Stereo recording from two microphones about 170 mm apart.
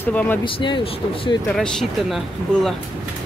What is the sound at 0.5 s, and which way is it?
Speech, 30° left (ahead or behind).